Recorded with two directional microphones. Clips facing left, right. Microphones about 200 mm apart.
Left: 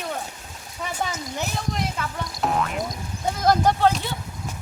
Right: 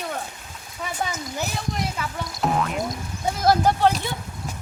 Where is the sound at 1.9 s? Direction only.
Centre (ahead or behind).